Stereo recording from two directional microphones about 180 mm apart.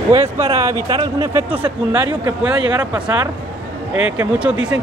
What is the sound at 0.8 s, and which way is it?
Speech, 25° right (ahead or behind).